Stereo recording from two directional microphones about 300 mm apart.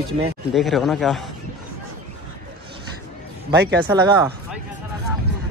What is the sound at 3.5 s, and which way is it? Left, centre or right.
Speech, right.